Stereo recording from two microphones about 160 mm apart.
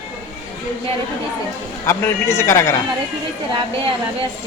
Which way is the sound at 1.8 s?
15° left (ahead or behind).